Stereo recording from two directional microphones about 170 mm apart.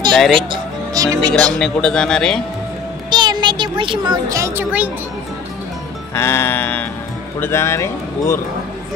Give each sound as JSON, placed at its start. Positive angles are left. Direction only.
{"t": 0.1, "sound": "speech", "side_deg": 5}
{"t": 0.4, "sound": "speech", "side_deg": -25}
{"t": 1.4, "sound": "a man's voice", "side_deg": 5}
{"t": 3.1, "sound": "speech", "side_deg": -25}
{"t": 6.1, "sound": "speech", "side_deg": 15}